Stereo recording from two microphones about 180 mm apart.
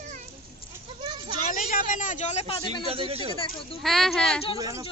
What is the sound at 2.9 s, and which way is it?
Speech, 35° right (ahead or behind).